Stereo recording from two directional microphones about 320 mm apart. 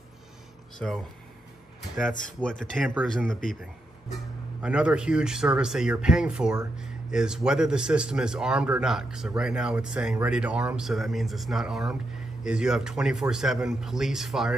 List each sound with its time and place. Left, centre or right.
0.7 s speech: centre
2.2 s speech: centre
4.6 s speech: centre